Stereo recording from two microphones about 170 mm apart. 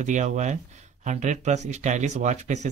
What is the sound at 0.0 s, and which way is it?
Speech, 45° right (ahead or behind).